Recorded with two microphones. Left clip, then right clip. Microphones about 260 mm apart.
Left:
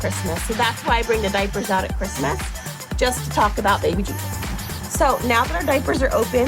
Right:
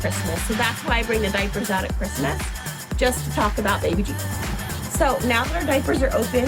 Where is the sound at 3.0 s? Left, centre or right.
Left.